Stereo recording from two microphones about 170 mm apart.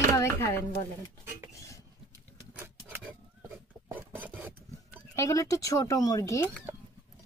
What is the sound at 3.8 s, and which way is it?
Filing, 10° right (ahead or behind).